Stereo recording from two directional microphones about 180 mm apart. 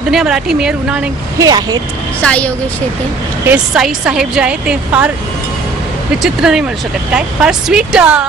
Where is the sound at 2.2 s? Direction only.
5° left (ahead or behind).